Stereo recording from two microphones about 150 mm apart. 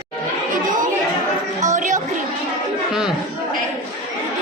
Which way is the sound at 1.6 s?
55° right (ahead or behind).